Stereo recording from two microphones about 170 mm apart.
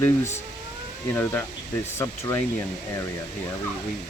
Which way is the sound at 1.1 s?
10° left (ahead or behind).